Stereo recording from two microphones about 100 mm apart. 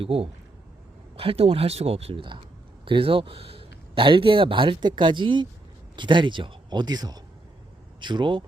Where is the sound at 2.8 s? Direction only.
60° right (ahead or behind); by 7.2 s 40° right (ahead or behind).